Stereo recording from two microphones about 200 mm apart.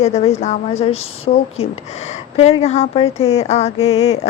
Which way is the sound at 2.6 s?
35° left (ahead or behind).